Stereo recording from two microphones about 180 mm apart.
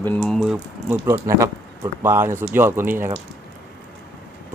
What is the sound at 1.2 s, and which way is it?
Speech, 20° right (ahead or behind).